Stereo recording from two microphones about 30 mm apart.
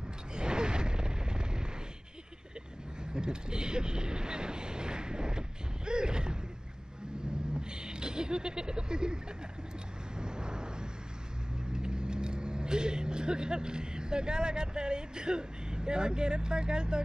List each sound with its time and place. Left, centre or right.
0.4 s a sound: right
3.0 s speech: right
5.9 s a sound: right
7.7 s speech: right
10.1 s vehicle: right
11.7 s speech: right